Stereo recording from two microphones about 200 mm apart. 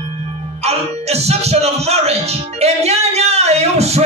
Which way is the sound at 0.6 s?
30° right (ahead or behind).